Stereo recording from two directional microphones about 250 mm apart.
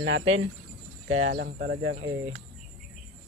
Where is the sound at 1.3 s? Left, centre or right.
Right.